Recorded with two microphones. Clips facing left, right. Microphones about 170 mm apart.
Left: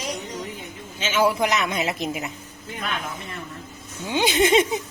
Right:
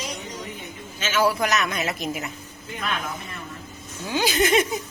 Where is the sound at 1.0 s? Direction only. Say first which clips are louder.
Left 1 dB; 20° left (ahead or behind).